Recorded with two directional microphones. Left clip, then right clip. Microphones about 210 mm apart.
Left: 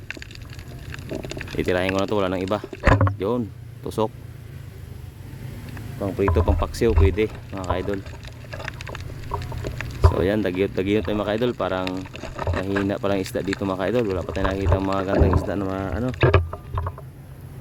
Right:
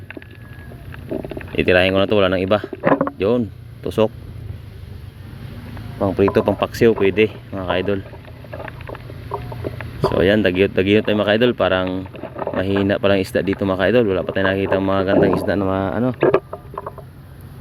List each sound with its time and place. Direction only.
1.2 s speech: 10° right (ahead or behind)
6.0 s speech: 20° right (ahead or behind); by 7.9 s 5° right (ahead or behind)
10.2 s speech: 5° right (ahead or behind)